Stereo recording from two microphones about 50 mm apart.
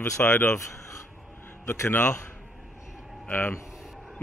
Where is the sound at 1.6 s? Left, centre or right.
Left.